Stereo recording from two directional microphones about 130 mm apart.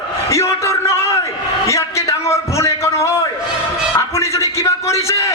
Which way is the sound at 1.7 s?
20° left (ahead or behind).